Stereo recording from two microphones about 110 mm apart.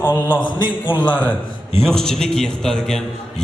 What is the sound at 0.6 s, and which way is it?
Speech, 45° left (ahead or behind).